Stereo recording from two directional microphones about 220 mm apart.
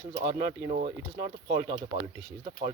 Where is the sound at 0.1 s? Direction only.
30° right (ahead or behind).